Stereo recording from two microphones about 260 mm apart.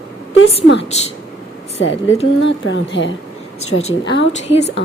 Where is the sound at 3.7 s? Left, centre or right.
Left.